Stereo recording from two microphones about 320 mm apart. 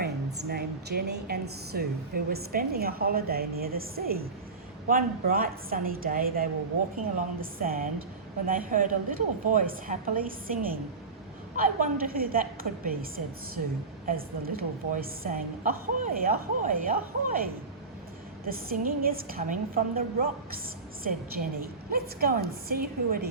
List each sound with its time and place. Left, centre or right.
0.0 s a woman's voice: right
21.6 s a woman's voice: right